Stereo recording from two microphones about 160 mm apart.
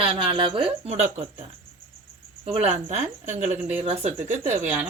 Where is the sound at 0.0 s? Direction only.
35° right (ahead or behind).